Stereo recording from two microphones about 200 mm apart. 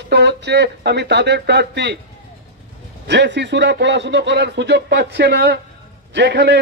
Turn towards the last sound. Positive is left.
turn(degrees=-55)  # may be behind; listen again after turning